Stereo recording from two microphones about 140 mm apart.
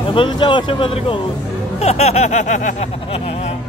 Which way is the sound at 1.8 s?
50° left (ahead or behind).